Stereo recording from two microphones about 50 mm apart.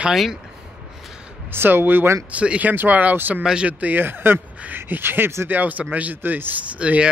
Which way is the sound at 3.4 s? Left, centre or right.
Centre.